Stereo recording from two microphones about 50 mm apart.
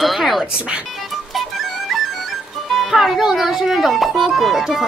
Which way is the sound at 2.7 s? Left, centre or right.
Centre.